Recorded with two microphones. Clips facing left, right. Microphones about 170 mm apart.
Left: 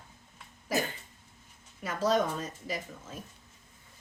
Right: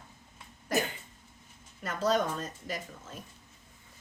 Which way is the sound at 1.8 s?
5° left (ahead or behind).